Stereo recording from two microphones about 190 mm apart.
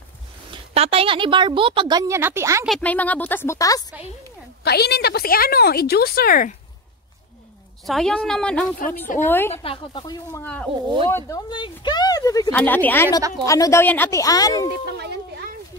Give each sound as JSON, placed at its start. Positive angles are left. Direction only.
{"t": 0.5, "sound": "speech", "side_deg": -30}
{"t": 2.6, "sound": "speech", "side_deg": 5}
{"t": 4.6, "sound": "speech", "side_deg": 60}
{"t": 7.8, "sound": "a woman's voice", "side_deg": 0}
{"t": 9.5, "sound": "speech", "side_deg": 30}
{"t": 10.4, "sound": "speech", "side_deg": 5}
{"t": 15.0, "sound": "a sound", "side_deg": -60}